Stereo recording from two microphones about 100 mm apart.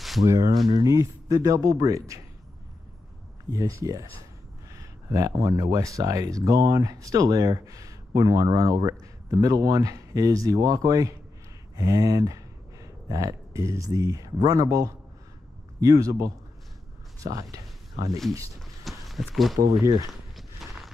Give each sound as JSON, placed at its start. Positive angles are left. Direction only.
{"t": 0.2, "sound": "speech", "side_deg": -40}
{"t": 3.4, "sound": "speech", "side_deg": -35}
{"t": 18.9, "sound": "a sound", "side_deg": 0}
{"t": 20.1, "sound": "walk", "side_deg": 0}